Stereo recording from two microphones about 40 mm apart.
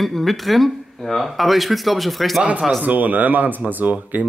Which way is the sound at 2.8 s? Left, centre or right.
Right.